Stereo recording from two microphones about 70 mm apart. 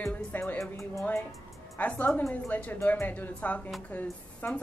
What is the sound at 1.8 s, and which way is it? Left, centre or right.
Speech, left.